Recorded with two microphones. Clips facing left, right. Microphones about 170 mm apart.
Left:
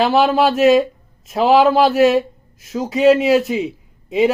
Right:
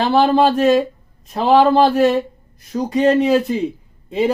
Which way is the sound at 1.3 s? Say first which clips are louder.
Even; 5° left (ahead or behind).